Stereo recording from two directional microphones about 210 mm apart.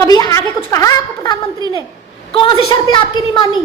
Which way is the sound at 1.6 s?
15° right (ahead or behind).